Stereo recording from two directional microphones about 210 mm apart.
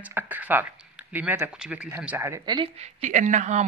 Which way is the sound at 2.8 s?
35° right (ahead or behind).